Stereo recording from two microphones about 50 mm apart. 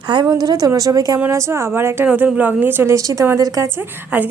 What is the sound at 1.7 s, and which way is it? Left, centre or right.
Speech, right.